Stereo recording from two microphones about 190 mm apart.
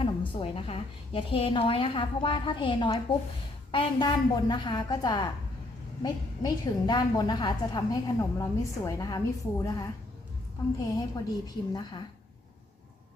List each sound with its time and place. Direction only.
0.3 s a woman's voice: 30° left (ahead or behind)